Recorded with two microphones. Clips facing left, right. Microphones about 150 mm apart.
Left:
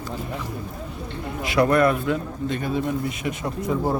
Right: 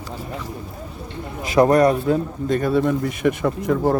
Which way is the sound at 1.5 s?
40° right (ahead or behind).